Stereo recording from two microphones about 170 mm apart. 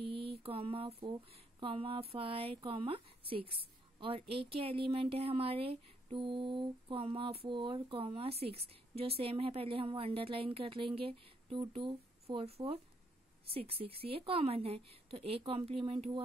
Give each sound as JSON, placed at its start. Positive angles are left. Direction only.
{"t": 0.4, "sound": "speech", "side_deg": -35}